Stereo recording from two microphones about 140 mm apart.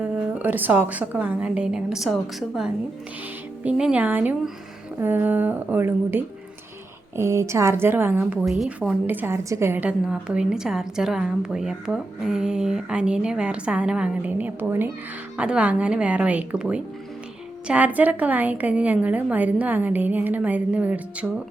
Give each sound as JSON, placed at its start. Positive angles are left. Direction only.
{"t": 0.0, "sound": "a woman's voice", "side_deg": -10}
{"t": 3.6, "sound": "a woman's voice", "side_deg": -5}
{"t": 8.4, "sound": "speech", "side_deg": 0}
{"t": 9.0, "sound": "a woman's voice", "side_deg": -15}